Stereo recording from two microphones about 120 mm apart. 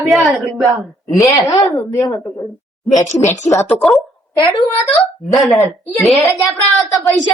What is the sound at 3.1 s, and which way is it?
Speech, 80° left.